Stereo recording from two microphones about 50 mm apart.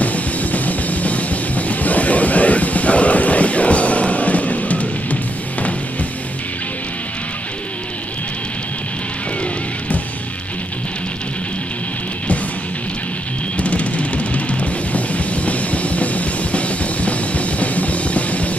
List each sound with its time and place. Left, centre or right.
0.0 s music: left
13.6 s music: left